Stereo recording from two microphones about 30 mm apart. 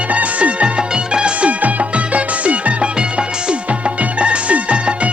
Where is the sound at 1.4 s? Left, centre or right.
Right.